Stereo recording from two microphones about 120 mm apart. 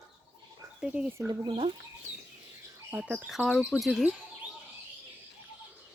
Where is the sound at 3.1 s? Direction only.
5° right (ahead or behind).